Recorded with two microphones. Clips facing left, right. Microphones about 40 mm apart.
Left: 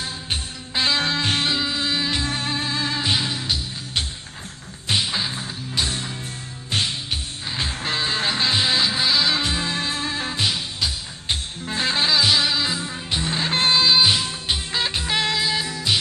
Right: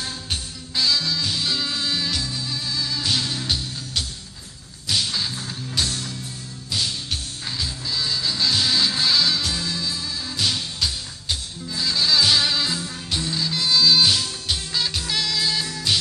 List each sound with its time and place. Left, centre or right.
0.0 s music: left
1.5 s music: left
2.2 s music: left
3.1 s music: left
4.8 s music: left
9.3 s music: left
10.4 s music: centre
11.2 s music: left
12.1 s music: centre
15.4 s music: centre